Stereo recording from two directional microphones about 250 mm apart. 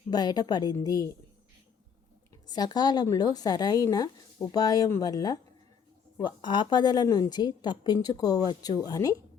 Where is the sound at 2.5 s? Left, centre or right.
Centre.